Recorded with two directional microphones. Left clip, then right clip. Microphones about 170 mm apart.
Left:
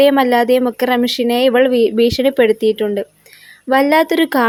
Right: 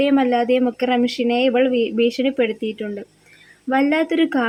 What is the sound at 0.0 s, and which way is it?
A woman's voice, 35° left (ahead or behind).